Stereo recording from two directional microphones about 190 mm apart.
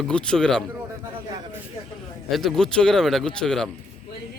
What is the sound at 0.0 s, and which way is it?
Speech, 5° left (ahead or behind).